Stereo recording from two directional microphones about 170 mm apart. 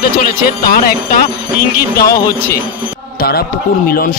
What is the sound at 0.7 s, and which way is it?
Speech, 60° left (ahead or behind).